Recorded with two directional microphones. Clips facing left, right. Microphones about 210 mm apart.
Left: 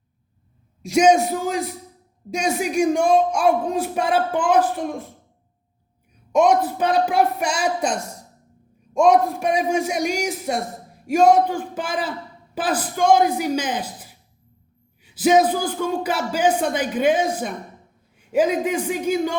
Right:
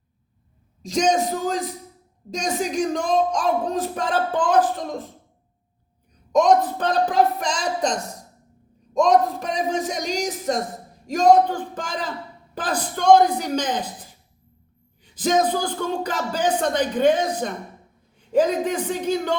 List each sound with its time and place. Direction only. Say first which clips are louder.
0.8 s speech: left 5 dB; 10° left (ahead or behind)
6.3 s speech: even; 10° left (ahead or behind)